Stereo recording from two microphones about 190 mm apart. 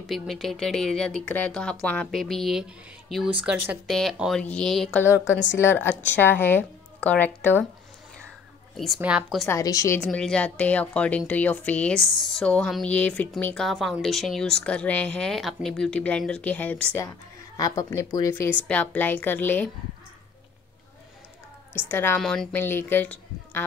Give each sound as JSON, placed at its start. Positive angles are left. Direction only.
{"t": 0.0, "sound": "a woman's voice", "side_deg": 0}
{"t": 5.3, "sound": "a woman's voice", "side_deg": 75}
{"t": 5.6, "sound": "a woman's voice", "side_deg": 10}
{"t": 8.7, "sound": "a woman's voice", "side_deg": 0}
{"t": 9.5, "sound": "a woman's voice", "side_deg": 15}
{"t": 17.6, "sound": "a woman's voice", "side_deg": 20}
{"t": 21.7, "sound": "a woman's voice", "side_deg": 10}